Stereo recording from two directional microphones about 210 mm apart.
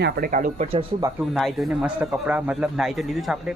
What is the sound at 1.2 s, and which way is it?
A man's voice, centre (ahead or behind).